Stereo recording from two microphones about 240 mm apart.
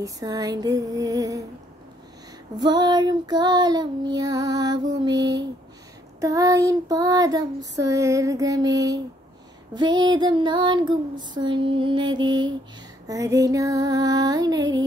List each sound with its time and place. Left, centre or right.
0.0 s child singing: centre
2.5 s child singing: centre
9.8 s female singing: centre
13.0 s child singing: centre